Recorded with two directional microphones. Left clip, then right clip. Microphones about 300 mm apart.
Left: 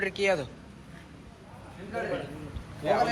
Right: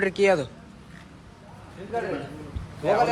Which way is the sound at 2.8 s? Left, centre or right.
Right.